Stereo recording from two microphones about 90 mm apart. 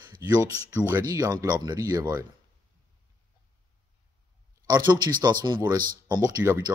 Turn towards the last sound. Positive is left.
turn(degrees=-35)  # may be behind; listen again after turning